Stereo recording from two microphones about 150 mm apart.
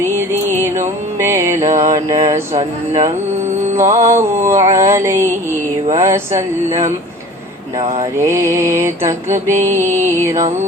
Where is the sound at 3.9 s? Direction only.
20° right (ahead or behind).